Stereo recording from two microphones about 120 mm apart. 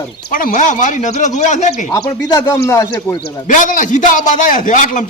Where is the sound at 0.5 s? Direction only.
90° left.